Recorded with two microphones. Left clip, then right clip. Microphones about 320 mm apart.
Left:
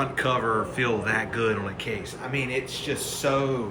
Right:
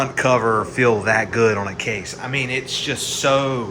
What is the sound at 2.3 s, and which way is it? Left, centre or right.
A man's voice, right.